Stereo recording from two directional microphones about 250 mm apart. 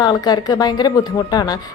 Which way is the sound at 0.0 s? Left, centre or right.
Centre.